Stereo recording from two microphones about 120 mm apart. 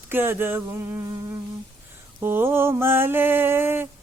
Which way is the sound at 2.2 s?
20° right (ahead or behind).